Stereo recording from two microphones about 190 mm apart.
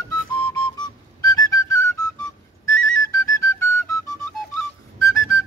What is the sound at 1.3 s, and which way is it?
Whistle, 20° left (ahead or behind).